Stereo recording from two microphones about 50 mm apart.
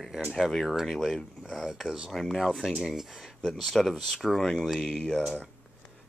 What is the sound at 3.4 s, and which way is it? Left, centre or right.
Speech, centre.